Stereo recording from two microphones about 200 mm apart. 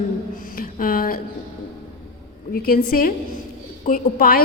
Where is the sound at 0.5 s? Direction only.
45° left (ahead or behind).